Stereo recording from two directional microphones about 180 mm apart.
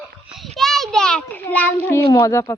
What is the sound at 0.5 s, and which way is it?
A child's voice, centre (ahead or behind).